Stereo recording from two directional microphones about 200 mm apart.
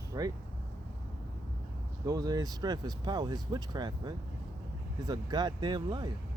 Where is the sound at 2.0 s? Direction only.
20° right (ahead or behind).